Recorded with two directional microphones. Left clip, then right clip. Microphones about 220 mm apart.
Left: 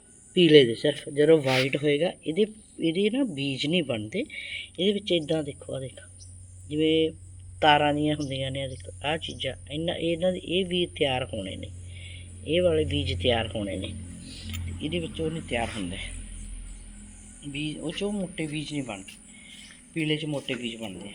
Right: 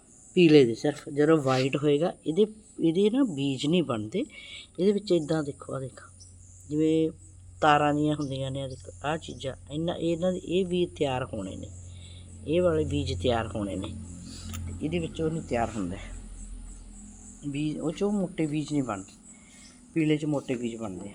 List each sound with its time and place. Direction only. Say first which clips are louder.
0.3 s speech: left 2 dB; 5° right (ahead or behind)
4.8 s speech: right 1 dB; 40° right (ahead or behind)
5.2 s speech: left 1 dB; 10° right (ahead or behind)
6.7 s speech: left 2 dB; 40° right (ahead or behind)
7.6 s speech: left 1 dB; 5° right (ahead or behind)
17.5 s speech: right 1 dB; 20° right (ahead or behind)